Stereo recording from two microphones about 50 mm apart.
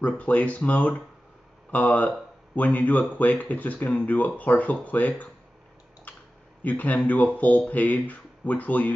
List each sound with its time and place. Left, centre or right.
0.0 s speech: left
6.1 s a sound: left
6.6 s speech: left